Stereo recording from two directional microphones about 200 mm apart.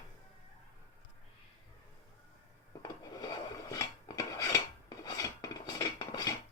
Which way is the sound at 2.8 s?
20° left (ahead or behind).